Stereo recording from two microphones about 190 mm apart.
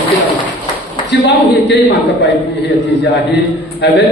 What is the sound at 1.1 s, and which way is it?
A woman's voice, 65° left (ahead or behind).